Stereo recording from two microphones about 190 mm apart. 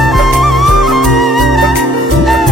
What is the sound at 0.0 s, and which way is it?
Music, centre (ahead or behind).